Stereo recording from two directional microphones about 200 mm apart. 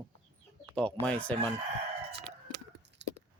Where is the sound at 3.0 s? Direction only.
60° right (ahead or behind).